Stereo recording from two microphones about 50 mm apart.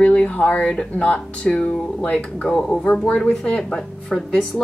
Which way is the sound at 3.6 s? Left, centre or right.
Centre.